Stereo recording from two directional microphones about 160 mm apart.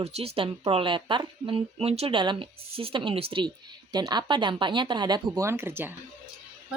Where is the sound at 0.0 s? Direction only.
40° right (ahead or behind); by 5.9 s 15° right (ahead or behind).